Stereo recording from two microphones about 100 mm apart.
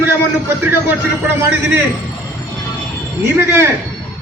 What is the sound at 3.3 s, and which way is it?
Speech, 25° right (ahead or behind).